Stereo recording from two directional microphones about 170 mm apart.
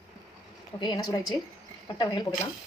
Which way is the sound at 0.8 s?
25° left (ahead or behind).